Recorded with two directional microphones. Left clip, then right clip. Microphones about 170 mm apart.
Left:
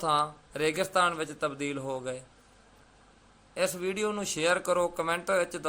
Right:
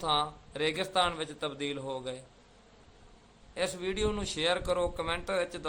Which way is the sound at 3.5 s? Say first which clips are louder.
Left 3 dB; 15° left (ahead or behind).